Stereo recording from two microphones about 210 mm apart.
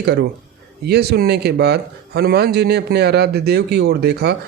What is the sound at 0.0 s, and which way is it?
Speech, 50° right (ahead or behind).